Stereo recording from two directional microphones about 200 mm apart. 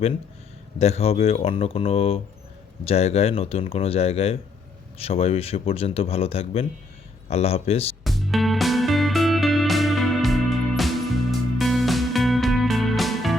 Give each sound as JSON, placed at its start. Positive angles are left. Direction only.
{"t": 0.8, "sound": "speech", "side_deg": 30}
{"t": 8.0, "sound": "music", "side_deg": 0}